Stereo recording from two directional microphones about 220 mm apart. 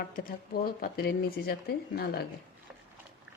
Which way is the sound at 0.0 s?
45° left (ahead or behind).